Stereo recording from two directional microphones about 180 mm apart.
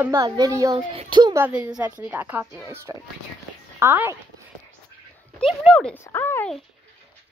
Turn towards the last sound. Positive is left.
turn(degrees=10)  # may be behind; listen again after turning